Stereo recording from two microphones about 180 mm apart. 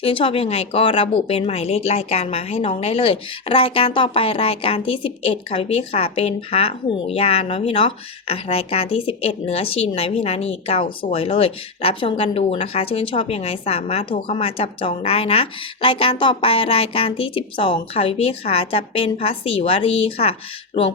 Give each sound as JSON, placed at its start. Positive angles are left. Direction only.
{"t": 0.0, "sound": "speech", "side_deg": 30}